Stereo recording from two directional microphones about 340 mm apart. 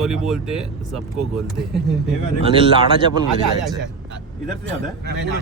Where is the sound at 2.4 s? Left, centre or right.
Centre.